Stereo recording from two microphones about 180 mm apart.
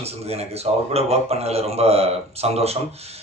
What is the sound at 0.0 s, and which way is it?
A man's voice, 35° right (ahead or behind).